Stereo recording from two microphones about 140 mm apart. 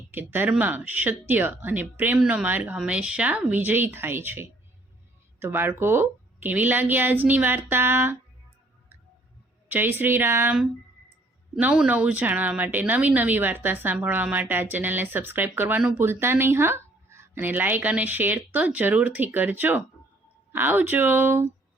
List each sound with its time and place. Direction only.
0.1 s speech: 15° right (ahead or behind)
9.6 s speech: 15° right (ahead or behind)
11.6 s speech: 10° right (ahead or behind)